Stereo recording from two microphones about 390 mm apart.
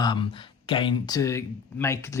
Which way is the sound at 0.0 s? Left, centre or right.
Centre.